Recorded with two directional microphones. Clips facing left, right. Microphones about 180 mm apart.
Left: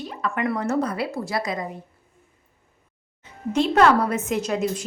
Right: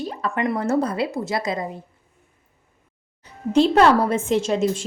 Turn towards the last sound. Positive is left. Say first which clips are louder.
# right 4 dB
turn(degrees=-25)  # may be behind; listen again after turning